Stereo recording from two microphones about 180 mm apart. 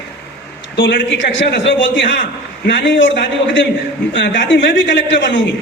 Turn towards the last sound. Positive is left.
turn(degrees=90)